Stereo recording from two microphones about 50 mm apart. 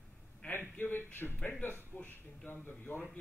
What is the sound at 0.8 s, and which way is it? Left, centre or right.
A man's voice, left.